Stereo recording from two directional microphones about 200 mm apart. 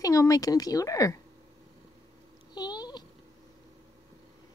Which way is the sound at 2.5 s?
20° left (ahead or behind).